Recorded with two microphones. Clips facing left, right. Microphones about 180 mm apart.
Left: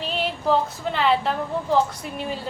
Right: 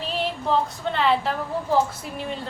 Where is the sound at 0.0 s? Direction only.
Centre (ahead or behind).